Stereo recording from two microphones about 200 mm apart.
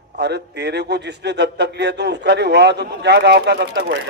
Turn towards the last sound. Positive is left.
turn(degrees=-55)  # may be behind; listen again after turning